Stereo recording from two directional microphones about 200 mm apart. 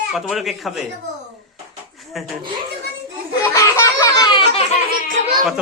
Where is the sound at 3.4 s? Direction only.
15° left (ahead or behind).